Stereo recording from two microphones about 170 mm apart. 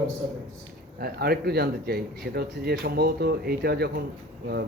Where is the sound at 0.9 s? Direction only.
65° right (ahead or behind).